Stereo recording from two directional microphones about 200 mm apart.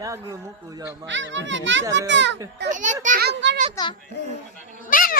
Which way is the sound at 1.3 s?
65° right (ahead or behind).